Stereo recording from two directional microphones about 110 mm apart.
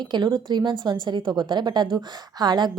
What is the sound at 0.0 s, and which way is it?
A woman's voice, 45° right (ahead or behind).